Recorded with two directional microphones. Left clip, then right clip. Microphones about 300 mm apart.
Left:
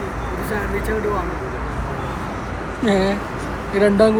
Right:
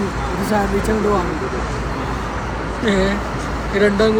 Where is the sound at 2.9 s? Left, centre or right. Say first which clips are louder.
Even; centre.